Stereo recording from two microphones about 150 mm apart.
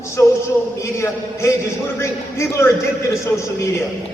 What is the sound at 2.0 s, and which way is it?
Speech, 15° left (ahead or behind).